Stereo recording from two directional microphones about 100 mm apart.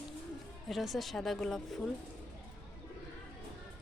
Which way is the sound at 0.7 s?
Centre (ahead or behind).